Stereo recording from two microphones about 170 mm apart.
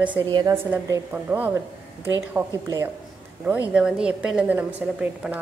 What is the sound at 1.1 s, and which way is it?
A woman's voice, 10° right (ahead or behind).